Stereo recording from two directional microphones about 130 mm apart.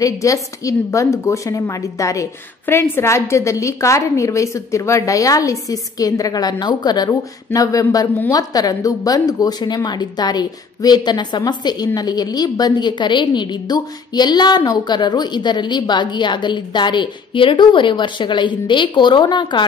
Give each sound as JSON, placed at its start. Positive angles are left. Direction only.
{"t": 0.0, "sound": "a woman's voice", "side_deg": 25}